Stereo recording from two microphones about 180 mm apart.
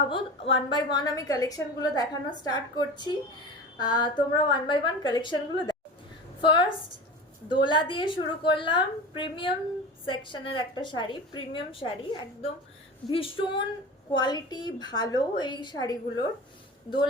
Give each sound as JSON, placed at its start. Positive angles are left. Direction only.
{"t": 0.1, "sound": "a woman's voice", "side_deg": 30}